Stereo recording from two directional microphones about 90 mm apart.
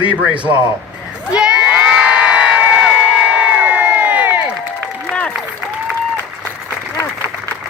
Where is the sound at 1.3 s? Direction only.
10° right (ahead or behind).